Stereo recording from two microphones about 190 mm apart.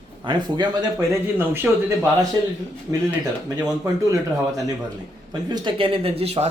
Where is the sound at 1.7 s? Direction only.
5° right (ahead or behind).